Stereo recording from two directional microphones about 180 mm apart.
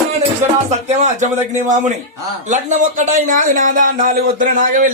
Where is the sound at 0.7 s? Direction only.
40° right (ahead or behind).